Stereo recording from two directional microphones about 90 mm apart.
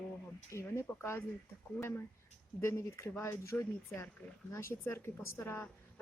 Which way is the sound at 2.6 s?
30° left (ahead or behind).